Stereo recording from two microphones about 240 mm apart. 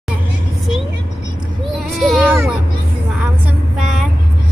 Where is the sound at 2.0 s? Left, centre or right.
Centre.